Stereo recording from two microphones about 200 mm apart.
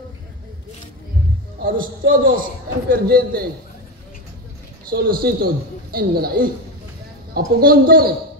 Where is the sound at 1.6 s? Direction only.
45° right (ahead or behind).